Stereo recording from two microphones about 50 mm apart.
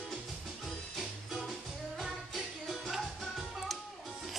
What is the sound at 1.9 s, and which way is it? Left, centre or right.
Music, centre.